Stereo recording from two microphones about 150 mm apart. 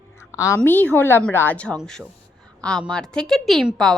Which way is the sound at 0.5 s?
10° left (ahead or behind).